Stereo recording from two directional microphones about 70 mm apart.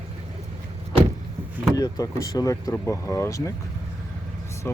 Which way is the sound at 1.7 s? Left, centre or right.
Left.